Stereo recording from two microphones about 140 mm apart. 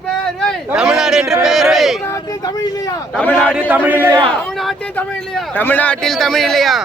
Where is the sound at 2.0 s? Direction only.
25° left (ahead or behind).